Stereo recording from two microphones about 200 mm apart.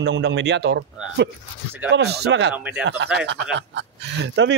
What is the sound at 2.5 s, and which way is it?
Speech, 5° right (ahead or behind).